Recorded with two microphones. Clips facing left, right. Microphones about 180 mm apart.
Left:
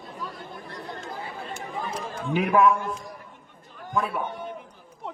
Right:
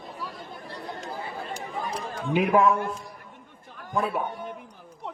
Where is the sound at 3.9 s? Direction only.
25° right (ahead or behind).